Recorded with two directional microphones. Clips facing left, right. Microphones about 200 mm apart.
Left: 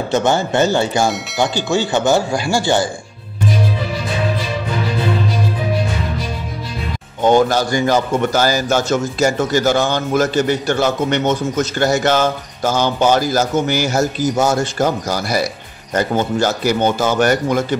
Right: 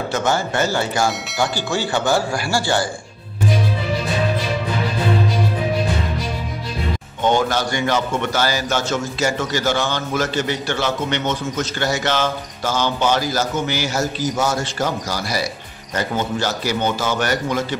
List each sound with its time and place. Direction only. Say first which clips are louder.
0.1 s speech: left 6 dB; 25° left (ahead or behind)
7.2 s a man's voice: left 5 dB; 40° left (ahead or behind)